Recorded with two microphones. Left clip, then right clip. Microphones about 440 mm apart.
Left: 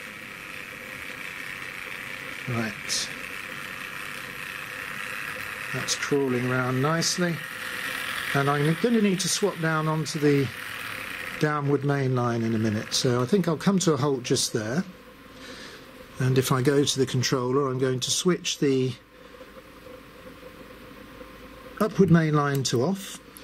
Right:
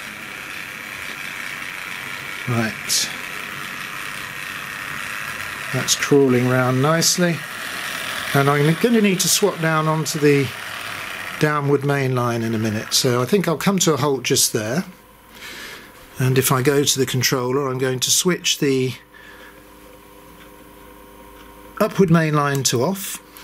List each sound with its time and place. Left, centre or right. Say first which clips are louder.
0.7 s a sound: right 7 dB; centre
2.8 s vehicle: right 7 dB; centre
6.0 s speech: right 10 dB; centre
7.3 s mechanisms: right 5 dB; centre
8.4 s speech: right 8 dB; centre
10.0 s mechanisms: right 7 dB; centre
11.4 s speech: right 7 dB; centre
12.6 s speech: right 8 dB; centre
16.3 s speech: right 6 dB; centre
21.8 s speech: right 5 dB; centre